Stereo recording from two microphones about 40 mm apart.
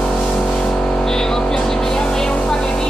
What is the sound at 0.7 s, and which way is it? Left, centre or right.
Vehicle, left.